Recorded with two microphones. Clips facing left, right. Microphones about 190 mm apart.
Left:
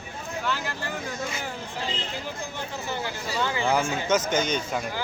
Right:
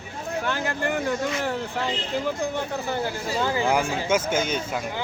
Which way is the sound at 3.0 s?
40° right (ahead or behind).